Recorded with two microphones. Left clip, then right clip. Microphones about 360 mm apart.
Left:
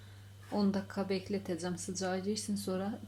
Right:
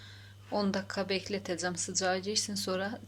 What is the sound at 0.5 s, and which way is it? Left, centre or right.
Speech, right.